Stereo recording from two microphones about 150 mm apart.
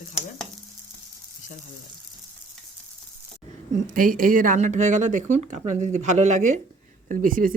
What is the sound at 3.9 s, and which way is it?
Speech, 65° right (ahead or behind).